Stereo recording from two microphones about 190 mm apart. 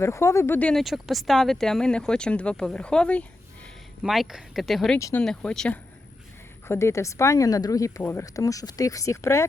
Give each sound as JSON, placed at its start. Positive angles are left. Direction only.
{"t": 0.0, "sound": "speech", "side_deg": 15}
{"t": 4.9, "sound": "speech", "side_deg": 15}
{"t": 5.2, "sound": "speech", "side_deg": 5}